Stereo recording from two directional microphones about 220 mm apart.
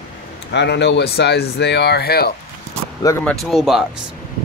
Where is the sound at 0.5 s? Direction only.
50° left (ahead or behind).